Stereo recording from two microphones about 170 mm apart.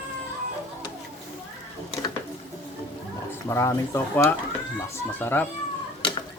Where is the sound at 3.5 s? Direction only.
15° left (ahead or behind).